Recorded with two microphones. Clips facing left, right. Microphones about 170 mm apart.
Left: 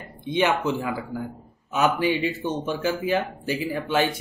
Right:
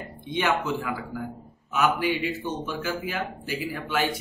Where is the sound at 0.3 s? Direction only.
20° left (ahead or behind).